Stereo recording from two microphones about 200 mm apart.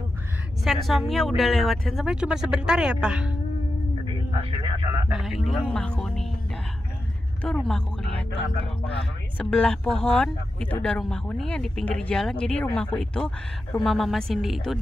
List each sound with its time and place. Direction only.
0.7 s speech: centre (ahead or behind)
4.8 s speech: 15° right (ahead or behind)
5.1 s speech: centre (ahead or behind)
7.4 s speech: 5° left (ahead or behind)
9.4 s speech: 5° left (ahead or behind)